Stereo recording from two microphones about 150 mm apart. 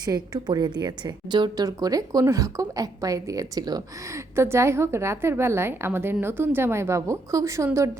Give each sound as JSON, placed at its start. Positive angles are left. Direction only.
{"t": 0.0, "sound": "a woman's voice", "side_deg": -25}